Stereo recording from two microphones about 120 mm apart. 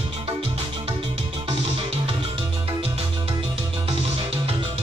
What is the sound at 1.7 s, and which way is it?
Music, 50° right (ahead or behind).